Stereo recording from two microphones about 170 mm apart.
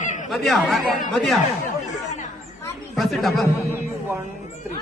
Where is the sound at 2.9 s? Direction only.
Centre (ahead or behind).